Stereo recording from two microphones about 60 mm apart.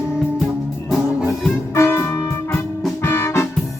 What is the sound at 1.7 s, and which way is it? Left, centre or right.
Music, left.